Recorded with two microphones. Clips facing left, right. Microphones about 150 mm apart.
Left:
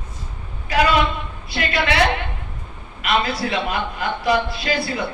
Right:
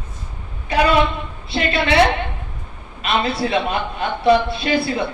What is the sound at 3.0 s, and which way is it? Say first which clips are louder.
A woman's voice: right 1 dB; 25° right (ahead or behind).